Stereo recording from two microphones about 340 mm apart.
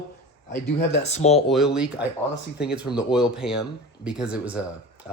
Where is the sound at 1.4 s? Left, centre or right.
Centre.